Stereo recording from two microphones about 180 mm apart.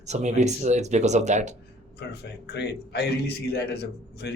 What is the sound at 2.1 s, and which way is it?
A man's voice, 65° left (ahead or behind).